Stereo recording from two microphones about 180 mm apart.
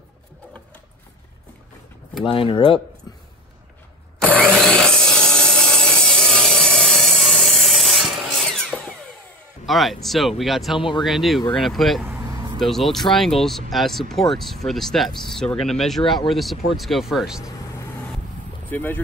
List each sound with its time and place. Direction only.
2.2 s speech: 30° left (ahead or behind)
4.5 s wood: 5° left (ahead or behind)
9.7 s speech: centre (ahead or behind)
10.8 s speech: 25° left (ahead or behind)
11.1 s speech: centre (ahead or behind)
12.0 s vehicle: 15° right (ahead or behind)
12.5 s speech: centre (ahead or behind)
18.7 s speech: 10° left (ahead or behind)